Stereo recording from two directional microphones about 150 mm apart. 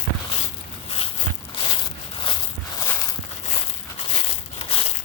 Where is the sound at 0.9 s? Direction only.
40° left (ahead or behind).